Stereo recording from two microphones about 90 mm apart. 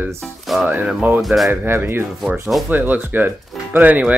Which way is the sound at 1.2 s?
Centre (ahead or behind).